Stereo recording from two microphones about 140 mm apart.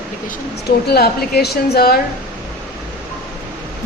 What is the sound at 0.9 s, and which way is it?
A woman's voice, 90° left.